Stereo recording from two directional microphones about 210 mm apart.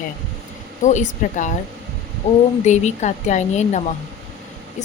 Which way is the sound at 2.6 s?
35° left (ahead or behind).